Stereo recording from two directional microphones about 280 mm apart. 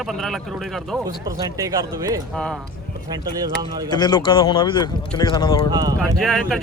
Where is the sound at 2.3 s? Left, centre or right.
Centre.